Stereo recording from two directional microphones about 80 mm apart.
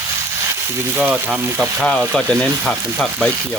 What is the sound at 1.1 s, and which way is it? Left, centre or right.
Speech, centre.